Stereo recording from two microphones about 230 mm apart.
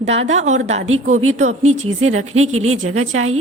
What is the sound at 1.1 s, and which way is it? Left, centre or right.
A woman's voice, right.